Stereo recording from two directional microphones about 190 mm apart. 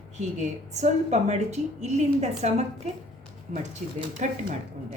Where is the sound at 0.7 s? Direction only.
35° right (ahead or behind).